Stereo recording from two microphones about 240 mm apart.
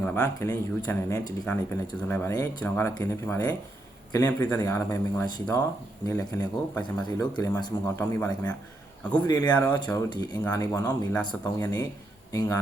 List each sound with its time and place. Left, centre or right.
0.0 s speech: centre